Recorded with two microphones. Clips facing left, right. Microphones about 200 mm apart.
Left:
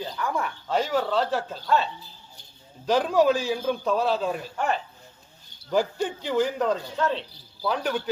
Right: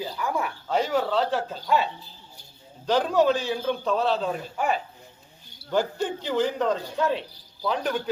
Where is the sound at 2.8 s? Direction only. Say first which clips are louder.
Left 1 dB; 5° left (ahead or behind).